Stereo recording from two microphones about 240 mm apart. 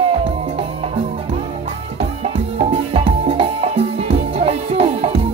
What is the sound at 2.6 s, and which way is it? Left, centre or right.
Music, right.